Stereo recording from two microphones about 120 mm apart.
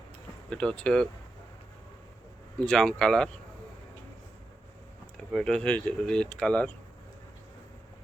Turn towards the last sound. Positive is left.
turn(degrees=10)  # may be behind; listen again after turning